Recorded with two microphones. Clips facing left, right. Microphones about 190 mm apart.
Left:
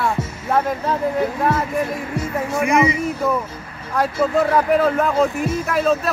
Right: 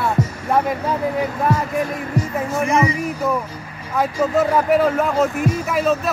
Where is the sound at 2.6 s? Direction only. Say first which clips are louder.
Left 2 dB; 15° left (ahead or behind).